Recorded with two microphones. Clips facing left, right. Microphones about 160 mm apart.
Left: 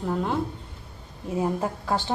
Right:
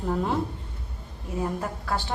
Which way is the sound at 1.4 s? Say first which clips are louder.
Left 3 dB; 20° left (ahead or behind).